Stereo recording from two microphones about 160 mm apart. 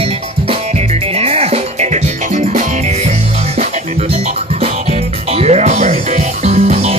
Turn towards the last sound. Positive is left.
turn(degrees=-45)  # may be behind; listen again after turning